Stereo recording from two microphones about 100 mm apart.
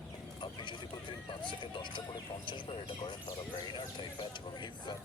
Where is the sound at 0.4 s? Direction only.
55° left (ahead or behind).